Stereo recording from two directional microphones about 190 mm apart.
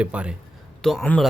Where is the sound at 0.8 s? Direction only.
5° left (ahead or behind).